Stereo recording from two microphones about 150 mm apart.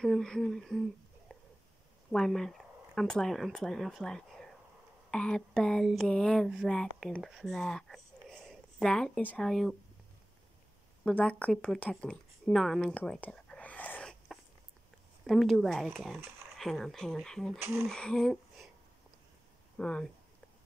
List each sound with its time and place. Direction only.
0.0 s speech: 5° left (ahead or behind)
1.3 s a sound: 5° left (ahead or behind)
2.1 s speech: 5° left (ahead or behind)
11.1 s speech: 10° left (ahead or behind)
17.6 s speech: 15° right (ahead or behind)
17.8 s a sound: 5° left (ahead or behind)
19.8 s speech: 5° left (ahead or behind)